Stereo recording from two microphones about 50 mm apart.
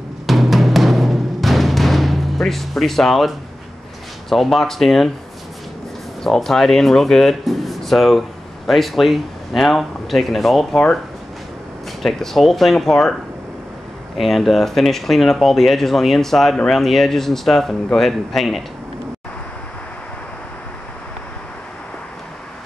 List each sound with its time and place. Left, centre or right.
0.3 s timpani: centre
4.3 s speech: centre
6.2 s speech: centre
12.0 s speech: centre